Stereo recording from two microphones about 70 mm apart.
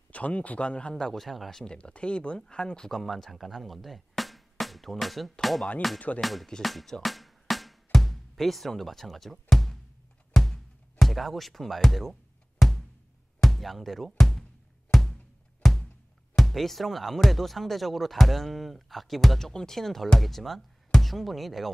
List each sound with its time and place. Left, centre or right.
0.1 s speech: centre
1.6 s speech: centre
5.9 s speech: centre
6.2 s speech: centre
6.6 s music: centre
16.3 s speech: centre